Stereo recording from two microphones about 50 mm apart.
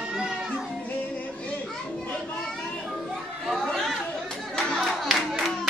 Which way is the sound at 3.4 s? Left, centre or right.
Centre.